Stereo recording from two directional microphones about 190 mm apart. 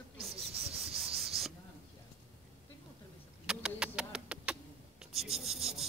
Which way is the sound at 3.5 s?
5° right (ahead or behind).